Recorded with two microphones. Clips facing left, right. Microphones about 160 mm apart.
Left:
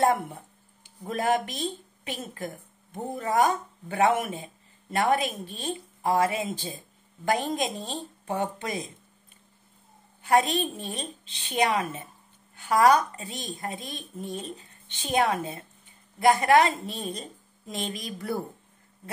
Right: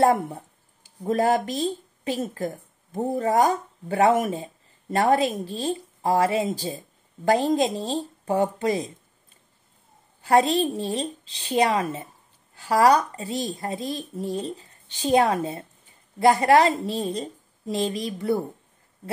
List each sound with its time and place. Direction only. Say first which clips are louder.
0.0 s speech: right 4 dB; 35° right (ahead or behind)
10.2 s speech: right 4 dB; 35° right (ahead or behind)